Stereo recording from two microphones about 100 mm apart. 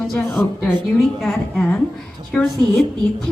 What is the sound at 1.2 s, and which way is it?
A woman's voice, 5° left (ahead or behind).